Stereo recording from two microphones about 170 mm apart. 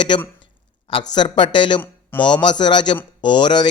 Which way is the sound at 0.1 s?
30° left (ahead or behind).